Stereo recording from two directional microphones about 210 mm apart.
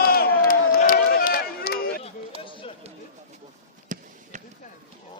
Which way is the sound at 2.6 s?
25° left (ahead or behind).